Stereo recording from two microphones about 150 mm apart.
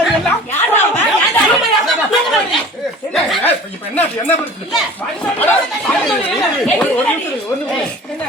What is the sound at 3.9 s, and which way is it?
Speech, 15° left (ahead or behind).